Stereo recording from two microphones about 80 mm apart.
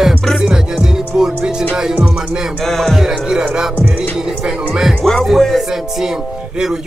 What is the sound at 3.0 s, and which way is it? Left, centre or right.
Music, centre.